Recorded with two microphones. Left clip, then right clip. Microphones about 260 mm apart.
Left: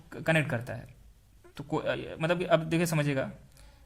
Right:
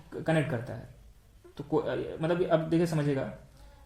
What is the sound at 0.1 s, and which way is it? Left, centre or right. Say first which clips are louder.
Speech: left 1 dB; left.